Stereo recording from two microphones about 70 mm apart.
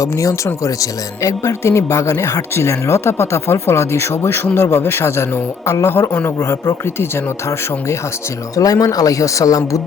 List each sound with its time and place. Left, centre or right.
0.0 s speech: left
6.1 s speech: left
6.4 s speech: left
8.5 s speech: left